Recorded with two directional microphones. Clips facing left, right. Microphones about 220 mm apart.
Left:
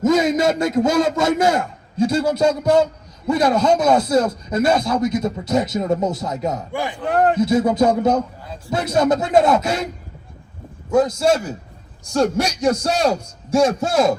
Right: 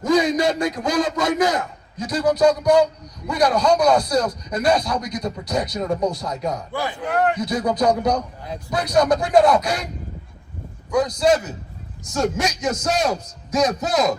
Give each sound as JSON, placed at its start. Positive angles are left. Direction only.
{"t": 0.0, "sound": "a man's voice", "side_deg": 25}
{"t": 7.1, "sound": "a man's voice", "side_deg": 35}
{"t": 10.9, "sound": "a man's voice", "side_deg": 25}